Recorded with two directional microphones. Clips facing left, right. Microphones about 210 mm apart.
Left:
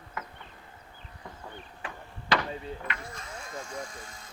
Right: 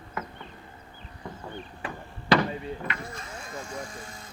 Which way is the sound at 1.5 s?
35° right (ahead or behind).